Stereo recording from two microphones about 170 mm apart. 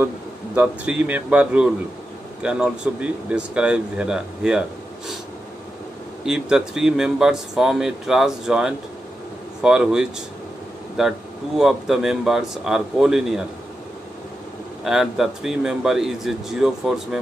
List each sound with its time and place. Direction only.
0.6 s speech: 10° right (ahead or behind)
6.2 s speech: 5° right (ahead or behind)
14.8 s speech: centre (ahead or behind)